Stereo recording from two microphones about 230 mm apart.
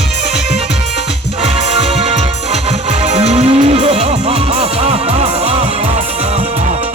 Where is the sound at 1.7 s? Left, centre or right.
Right.